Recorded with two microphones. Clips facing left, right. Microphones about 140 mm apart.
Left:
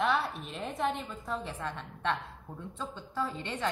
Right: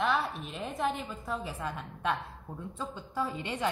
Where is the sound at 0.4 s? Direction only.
Centre (ahead or behind).